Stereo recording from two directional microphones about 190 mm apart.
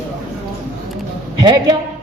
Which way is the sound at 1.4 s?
20° right (ahead or behind).